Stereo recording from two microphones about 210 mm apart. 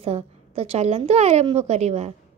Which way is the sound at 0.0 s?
30° right (ahead or behind).